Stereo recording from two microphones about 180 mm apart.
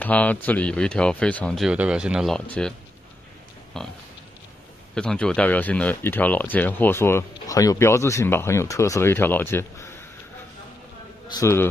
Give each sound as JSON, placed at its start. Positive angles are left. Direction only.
{"t": 0.0, "sound": "speech", "side_deg": 10}
{"t": 3.8, "sound": "speech", "side_deg": 5}
{"t": 4.9, "sound": "speech", "side_deg": 5}
{"t": 11.3, "sound": "speech", "side_deg": 15}